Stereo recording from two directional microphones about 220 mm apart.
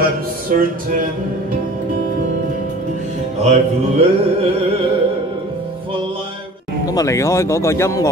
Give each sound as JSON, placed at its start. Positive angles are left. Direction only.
{"t": 0.0, "sound": "music", "side_deg": -40}
{"t": 3.3, "sound": "music", "side_deg": -30}
{"t": 6.9, "sound": "speech", "side_deg": 15}